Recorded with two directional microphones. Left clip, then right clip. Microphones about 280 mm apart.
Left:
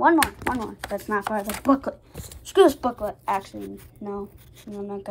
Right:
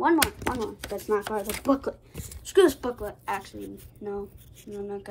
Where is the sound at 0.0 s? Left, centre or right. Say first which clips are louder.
Left 4 dB; left.